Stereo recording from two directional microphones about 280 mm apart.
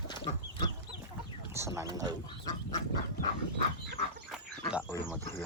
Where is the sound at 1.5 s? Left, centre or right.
Centre.